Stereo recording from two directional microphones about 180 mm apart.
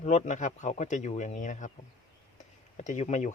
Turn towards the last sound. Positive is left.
turn(degrees=40)  # may be behind; listen again after turning